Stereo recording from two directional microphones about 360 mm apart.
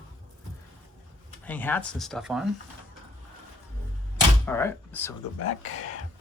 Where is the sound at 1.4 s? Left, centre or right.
Centre.